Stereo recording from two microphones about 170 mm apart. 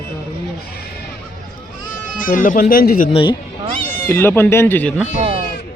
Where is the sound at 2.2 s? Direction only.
55° left (ahead or behind).